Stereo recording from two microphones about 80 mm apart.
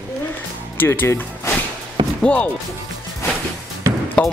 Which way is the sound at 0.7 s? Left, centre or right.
Left.